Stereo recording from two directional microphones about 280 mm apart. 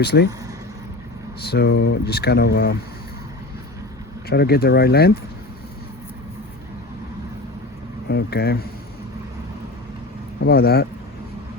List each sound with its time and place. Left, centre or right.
0.0 s speech: left
1.4 s speech: left
4.3 s speech: left
8.0 s speech: left
10.4 s speech: left